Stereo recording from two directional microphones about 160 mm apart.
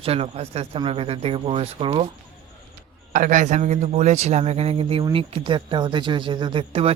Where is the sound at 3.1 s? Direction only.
55° right (ahead or behind).